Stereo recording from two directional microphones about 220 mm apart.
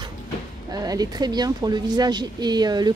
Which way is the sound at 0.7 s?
15° right (ahead or behind).